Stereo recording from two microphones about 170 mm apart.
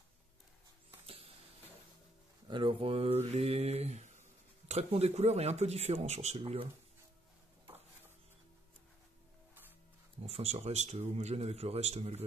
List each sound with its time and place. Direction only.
1.0 s a sound: 35° right (ahead or behind)
2.4 s speech: 30° right (ahead or behind)
10.2 s speech: 40° right (ahead or behind)